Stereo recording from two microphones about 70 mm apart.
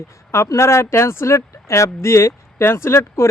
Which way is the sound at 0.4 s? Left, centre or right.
Left.